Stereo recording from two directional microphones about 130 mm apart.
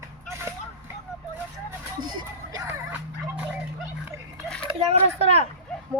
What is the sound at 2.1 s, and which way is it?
Speech, 30° right (ahead or behind).